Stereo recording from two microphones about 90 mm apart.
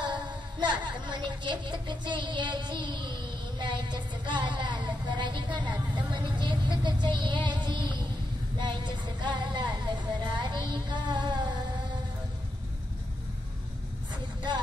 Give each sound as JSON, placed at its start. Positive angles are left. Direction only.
{"t": 0.0, "sound": "a woman's voice", "side_deg": -60}
{"t": 8.5, "sound": "music", "side_deg": -60}